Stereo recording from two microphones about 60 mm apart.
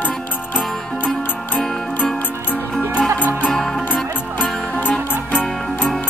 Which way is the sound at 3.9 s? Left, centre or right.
Left.